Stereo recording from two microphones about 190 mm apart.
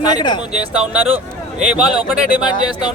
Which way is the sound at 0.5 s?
5° right (ahead or behind).